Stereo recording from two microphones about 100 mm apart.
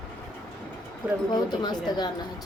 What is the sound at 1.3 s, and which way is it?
Speech, 45° left (ahead or behind).